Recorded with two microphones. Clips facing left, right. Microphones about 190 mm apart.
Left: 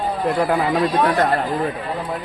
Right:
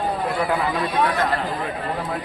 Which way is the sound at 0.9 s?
55° left (ahead or behind).